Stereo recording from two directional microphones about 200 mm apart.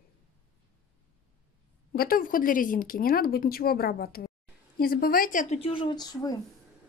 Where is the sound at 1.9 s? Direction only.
45° left (ahead or behind).